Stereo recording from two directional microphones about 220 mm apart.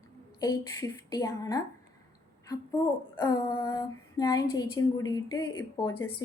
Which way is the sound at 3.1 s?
10° left (ahead or behind).